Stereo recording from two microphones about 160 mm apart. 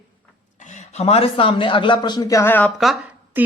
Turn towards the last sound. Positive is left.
turn(degrees=-10)  # may be behind; listen again after turning